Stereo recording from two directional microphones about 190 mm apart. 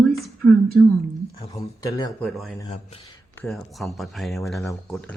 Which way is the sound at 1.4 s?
20° left (ahead or behind).